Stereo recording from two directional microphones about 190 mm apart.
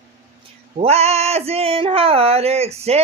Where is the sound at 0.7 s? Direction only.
35° right (ahead or behind).